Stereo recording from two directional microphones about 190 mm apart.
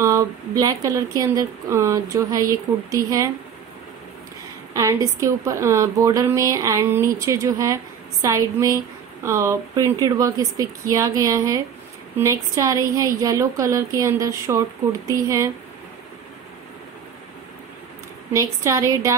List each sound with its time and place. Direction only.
0.0 s a woman's voice: 15° right (ahead or behind)
4.7 s a woman's voice: 15° right (ahead or behind)
18.3 s a woman's voice: 15° right (ahead or behind)